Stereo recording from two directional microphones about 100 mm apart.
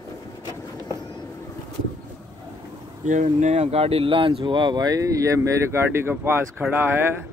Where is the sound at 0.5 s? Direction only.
30° right (ahead or behind).